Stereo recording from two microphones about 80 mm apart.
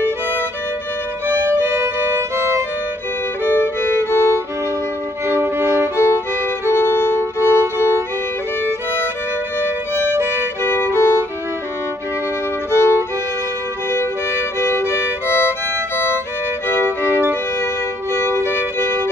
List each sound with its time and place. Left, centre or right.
3.6 s music: left
5.2 s violin: right
5.9 s music: left
10.6 s violin: left
12.7 s music: left
14.6 s music: left
16.6 s music: left
18.1 s violin: left